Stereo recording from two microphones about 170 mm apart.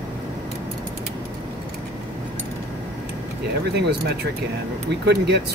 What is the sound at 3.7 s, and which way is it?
Speech, 75° right (ahead or behind).